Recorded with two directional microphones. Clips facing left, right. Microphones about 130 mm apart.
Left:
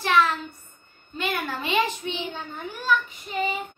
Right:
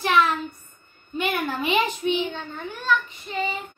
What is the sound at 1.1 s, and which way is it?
A woman's voice, 15° right (ahead or behind).